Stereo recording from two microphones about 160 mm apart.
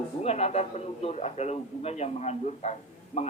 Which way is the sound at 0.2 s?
40° left (ahead or behind).